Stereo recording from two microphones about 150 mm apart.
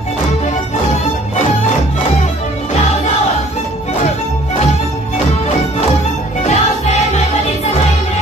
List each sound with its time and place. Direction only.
6.4 s music: 50° left (ahead or behind)